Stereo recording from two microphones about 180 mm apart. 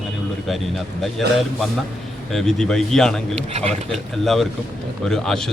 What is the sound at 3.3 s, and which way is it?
Speech, 35° right (ahead or behind).